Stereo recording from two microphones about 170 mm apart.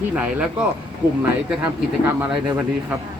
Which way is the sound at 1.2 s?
10° right (ahead or behind).